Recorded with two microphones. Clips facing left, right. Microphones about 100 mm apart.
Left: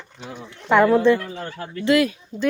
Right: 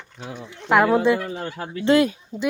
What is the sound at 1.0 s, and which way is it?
Speech, 10° right (ahead or behind).